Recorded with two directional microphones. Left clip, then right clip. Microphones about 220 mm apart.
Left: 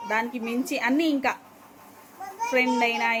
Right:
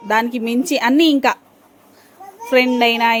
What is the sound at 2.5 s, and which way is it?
Speech, 45° right (ahead or behind).